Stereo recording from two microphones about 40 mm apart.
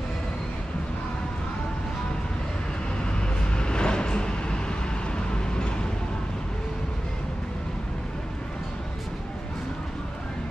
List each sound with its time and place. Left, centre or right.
3.5 s vehicle: left